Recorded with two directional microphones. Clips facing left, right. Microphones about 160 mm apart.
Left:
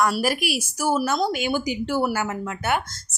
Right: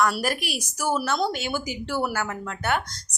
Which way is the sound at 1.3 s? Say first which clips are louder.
Left 5 dB; 15° left (ahead or behind).